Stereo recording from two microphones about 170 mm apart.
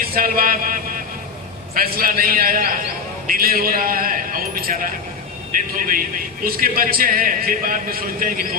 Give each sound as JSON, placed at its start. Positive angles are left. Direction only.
{"t": 0.2, "sound": "a man's voice", "side_deg": -55}